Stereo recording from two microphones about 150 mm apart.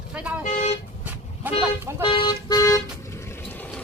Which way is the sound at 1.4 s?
10° right (ahead or behind).